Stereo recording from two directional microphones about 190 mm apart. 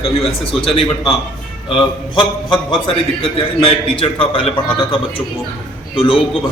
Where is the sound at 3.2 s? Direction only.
30° left (ahead or behind).